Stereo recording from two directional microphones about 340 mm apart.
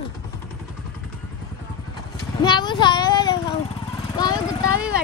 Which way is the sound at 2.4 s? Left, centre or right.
Centre.